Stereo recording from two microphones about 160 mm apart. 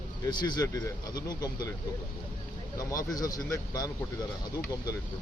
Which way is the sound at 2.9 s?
20° left (ahead or behind).